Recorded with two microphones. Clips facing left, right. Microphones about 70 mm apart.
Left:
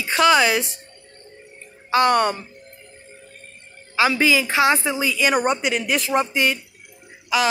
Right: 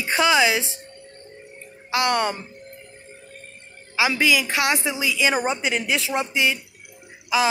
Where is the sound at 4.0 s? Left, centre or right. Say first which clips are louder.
Left 2 dB; centre.